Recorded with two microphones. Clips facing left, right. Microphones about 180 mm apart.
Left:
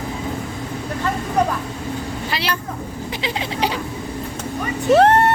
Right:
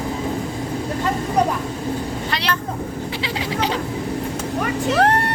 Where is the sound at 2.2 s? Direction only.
5° left (ahead or behind).